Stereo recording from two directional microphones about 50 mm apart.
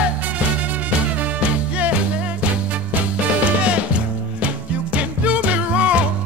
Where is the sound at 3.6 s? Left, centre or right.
Right.